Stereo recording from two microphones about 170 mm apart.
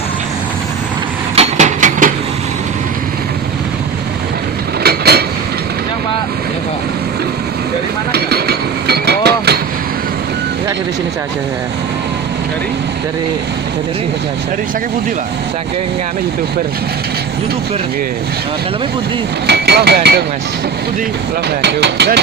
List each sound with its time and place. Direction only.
1.4 s a sound: 45° right (ahead or behind)
4.8 s train: 70° right (ahead or behind)
8.1 s vehicle: 70° right (ahead or behind)
19.5 s speech: 75° right (ahead or behind)
21.6 s speech: 80° right